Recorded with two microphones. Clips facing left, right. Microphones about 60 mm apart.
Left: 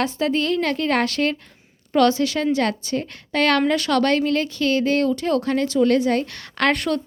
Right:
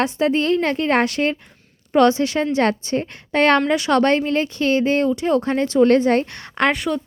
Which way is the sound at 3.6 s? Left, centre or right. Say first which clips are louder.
Right 2 dB; centre.